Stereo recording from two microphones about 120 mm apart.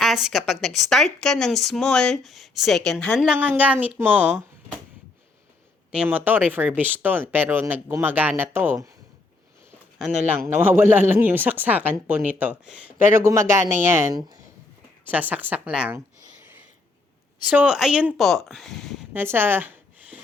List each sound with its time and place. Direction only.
0.0 s a woman's voice: 5° right (ahead or behind)
3.2 s speech: 10° right (ahead or behind)
5.9 s speech: 10° right (ahead or behind)
10.0 s a woman's voice: 5° right (ahead or behind)
10.4 s speech: 15° right (ahead or behind)
13.0 s speech: 20° right (ahead or behind)
14.1 s speech: 35° right (ahead or behind)
15.0 s speech: 15° right (ahead or behind)
17.5 s a woman's voice: 10° right (ahead or behind)
19.1 s a sound: 20° right (ahead or behind)